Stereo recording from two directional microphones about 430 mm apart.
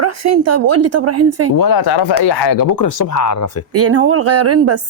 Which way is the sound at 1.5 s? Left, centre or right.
Left.